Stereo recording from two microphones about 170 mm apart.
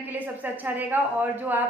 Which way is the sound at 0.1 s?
10° right (ahead or behind).